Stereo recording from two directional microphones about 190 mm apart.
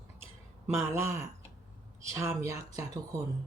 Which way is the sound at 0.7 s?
15° right (ahead or behind).